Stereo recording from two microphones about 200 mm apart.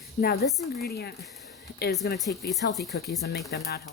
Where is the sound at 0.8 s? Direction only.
50° left (ahead or behind).